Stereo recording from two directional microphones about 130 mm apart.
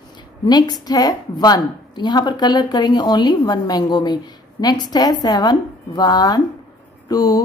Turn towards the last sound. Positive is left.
turn(degrees=25)  # may be behind; listen again after turning